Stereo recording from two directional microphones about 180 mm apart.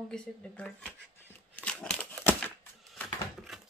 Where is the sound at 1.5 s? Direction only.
5° left (ahead or behind).